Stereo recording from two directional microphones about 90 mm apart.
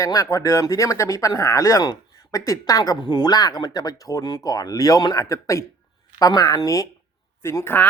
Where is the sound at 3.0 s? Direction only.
50° left (ahead or behind).